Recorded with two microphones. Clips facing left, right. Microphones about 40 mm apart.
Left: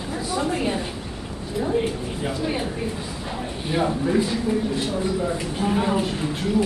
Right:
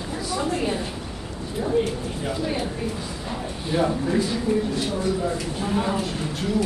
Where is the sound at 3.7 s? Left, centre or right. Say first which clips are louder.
Right 1 dB; left.